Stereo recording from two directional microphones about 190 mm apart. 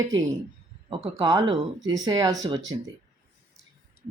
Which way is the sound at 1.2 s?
20° right (ahead or behind).